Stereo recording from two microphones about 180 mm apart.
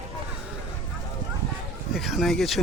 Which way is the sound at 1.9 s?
Centre (ahead or behind).